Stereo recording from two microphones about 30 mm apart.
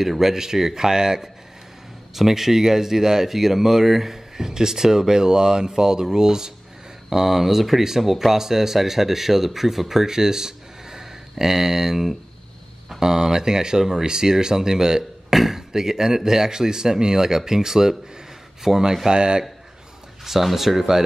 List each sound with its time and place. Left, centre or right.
0.0 s speech: centre
2.1 s speech: centre
15.3 s speech: centre
15.7 s speech: centre
19.0 s speech: right
20.2 s speech: centre